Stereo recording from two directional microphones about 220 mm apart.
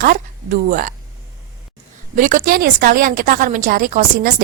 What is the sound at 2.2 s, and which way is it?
A woman's voice, 35° right (ahead or behind).